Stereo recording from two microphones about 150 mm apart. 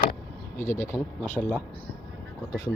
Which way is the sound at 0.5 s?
15° left (ahead or behind).